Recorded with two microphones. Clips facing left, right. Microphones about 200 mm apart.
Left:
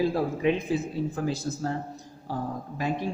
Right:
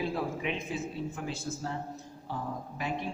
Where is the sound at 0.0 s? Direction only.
35° left (ahead or behind).